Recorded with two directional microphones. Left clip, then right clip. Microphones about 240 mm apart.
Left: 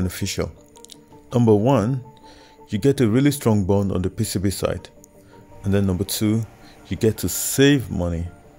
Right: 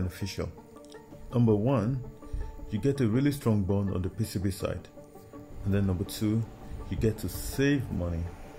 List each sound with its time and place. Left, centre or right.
0.1 s speech: left